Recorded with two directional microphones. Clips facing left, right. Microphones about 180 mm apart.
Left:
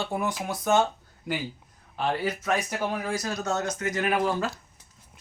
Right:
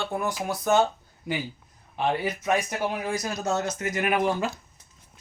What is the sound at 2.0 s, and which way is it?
Speech, 20° right (ahead or behind).